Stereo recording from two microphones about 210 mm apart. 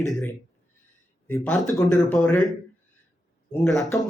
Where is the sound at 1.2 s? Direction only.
5° left (ahead or behind).